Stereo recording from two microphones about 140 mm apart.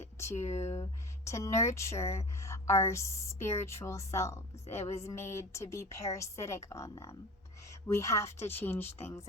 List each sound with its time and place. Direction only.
0.4 s speech: 55° left (ahead or behind)
1.2 s a woman's voice: 20° left (ahead or behind)